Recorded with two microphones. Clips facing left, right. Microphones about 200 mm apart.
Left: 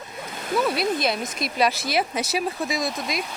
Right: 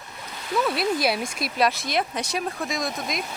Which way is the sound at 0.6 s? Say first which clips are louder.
Right 1 dB; centre (ahead or behind).